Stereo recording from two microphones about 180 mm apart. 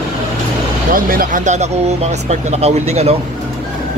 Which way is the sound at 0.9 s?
50° right (ahead or behind).